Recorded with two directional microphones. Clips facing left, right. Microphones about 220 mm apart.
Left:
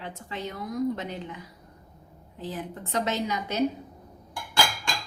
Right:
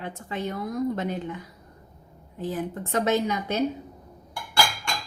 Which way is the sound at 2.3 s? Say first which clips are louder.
Right 5 dB; 50° right (ahead or behind).